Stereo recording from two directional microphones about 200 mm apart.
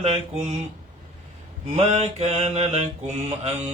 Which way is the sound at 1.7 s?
35° right (ahead or behind).